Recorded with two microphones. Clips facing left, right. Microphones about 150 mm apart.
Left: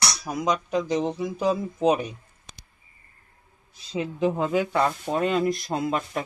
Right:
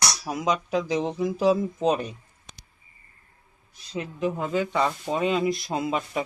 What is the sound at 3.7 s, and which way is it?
Speech, 25° left (ahead or behind).